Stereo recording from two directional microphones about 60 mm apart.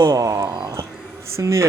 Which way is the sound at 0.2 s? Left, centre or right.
Right.